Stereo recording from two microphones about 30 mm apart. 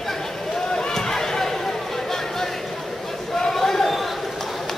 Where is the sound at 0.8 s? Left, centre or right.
Centre.